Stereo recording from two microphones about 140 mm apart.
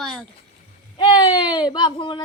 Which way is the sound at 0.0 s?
5° left (ahead or behind).